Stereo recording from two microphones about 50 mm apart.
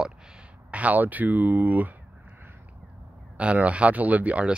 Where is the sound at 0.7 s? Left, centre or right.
Right.